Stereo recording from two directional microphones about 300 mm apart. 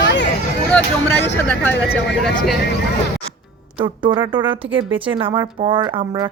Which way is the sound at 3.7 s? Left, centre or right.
Centre.